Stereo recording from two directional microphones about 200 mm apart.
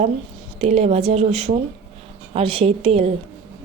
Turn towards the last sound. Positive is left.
turn(degrees=-30)  # may be behind; listen again after turning